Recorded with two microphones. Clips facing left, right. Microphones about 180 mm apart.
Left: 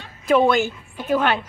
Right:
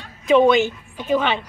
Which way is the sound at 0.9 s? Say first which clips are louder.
Even; 5° left (ahead or behind).